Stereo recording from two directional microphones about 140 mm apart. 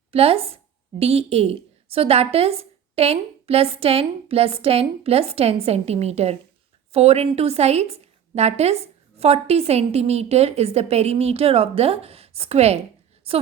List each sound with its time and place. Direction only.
0.1 s a woman's voice: 45° right (ahead or behind)